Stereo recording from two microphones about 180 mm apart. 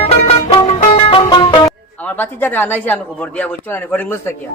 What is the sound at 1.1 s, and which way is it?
Music, 25° left (ahead or behind).